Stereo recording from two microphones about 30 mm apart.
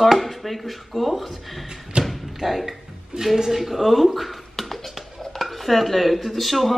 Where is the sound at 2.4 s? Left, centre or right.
Centre.